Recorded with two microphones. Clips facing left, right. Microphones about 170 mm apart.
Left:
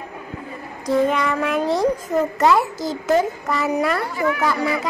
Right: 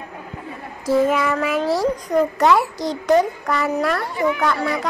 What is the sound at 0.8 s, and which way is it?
A child's voice, 5° right (ahead or behind).